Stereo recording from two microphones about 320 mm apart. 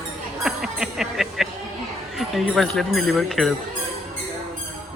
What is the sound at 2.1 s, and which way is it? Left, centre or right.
Speech, centre.